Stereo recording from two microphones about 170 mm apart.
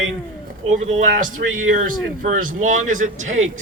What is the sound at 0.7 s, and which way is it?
Speech, 50° right (ahead or behind).